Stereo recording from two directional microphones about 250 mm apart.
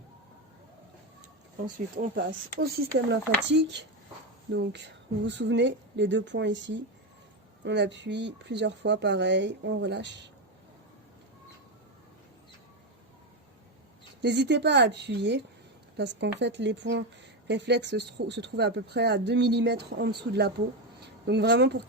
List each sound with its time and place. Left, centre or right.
2.0 s speech: right
14.2 s speech: right